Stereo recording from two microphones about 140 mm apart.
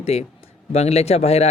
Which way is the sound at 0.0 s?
50° left (ahead or behind).